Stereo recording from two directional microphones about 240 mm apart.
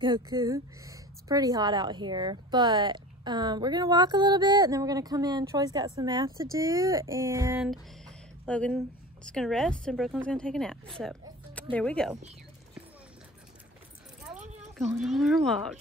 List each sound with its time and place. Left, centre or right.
0.0 s a woman's voice: centre
15.0 s a woman's voice: centre